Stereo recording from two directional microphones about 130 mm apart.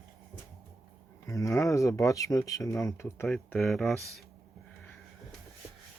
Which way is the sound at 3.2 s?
5° left (ahead or behind).